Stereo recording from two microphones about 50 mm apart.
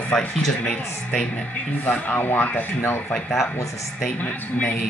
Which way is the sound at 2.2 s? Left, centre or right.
Left.